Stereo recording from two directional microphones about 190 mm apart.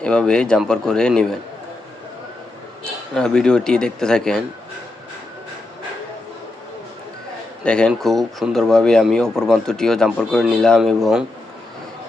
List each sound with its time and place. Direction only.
0.0 s speech: 5° left (ahead or behind)
3.2 s speech: 5° left (ahead or behind)
7.6 s speech: 5° left (ahead or behind)